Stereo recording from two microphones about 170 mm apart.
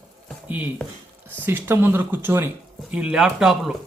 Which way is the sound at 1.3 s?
10° right (ahead or behind).